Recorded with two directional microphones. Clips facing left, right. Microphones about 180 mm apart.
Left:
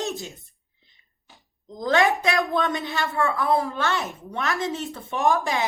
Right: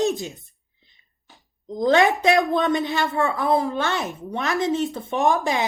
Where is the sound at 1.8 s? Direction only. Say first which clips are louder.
Right 3 dB; 20° right (ahead or behind).